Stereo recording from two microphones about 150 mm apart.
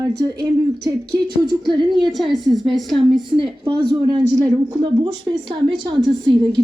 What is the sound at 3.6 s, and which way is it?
Speech, 30° right (ahead or behind).